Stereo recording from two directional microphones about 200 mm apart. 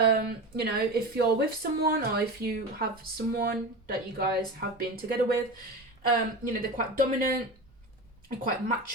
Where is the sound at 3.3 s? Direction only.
50° right (ahead or behind).